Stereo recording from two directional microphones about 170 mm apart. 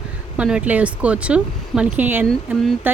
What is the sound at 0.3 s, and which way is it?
A woman's voice, 5° right (ahead or behind).